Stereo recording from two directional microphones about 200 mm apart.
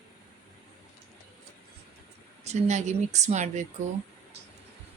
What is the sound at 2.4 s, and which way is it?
Speech, 35° right (ahead or behind).